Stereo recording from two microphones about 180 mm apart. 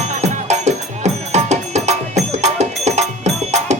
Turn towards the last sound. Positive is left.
turn(degrees=-40)  # may be behind; listen again after turning